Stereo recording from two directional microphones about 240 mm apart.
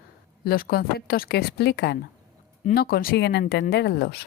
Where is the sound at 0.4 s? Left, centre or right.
Left.